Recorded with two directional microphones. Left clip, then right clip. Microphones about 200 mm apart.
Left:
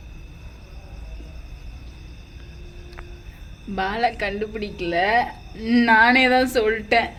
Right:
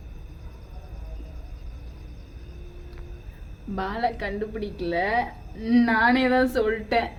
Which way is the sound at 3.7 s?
Centre (ahead or behind).